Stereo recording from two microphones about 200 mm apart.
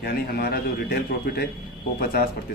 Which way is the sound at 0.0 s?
50° left (ahead or behind).